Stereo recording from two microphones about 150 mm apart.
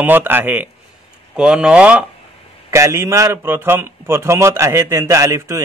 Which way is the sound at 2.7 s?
20° right (ahead or behind).